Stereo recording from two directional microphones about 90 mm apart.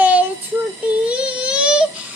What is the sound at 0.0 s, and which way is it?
Child singing, 15° right (ahead or behind).